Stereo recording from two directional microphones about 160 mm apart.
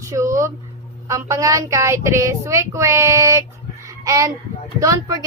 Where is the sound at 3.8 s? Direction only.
20° right (ahead or behind).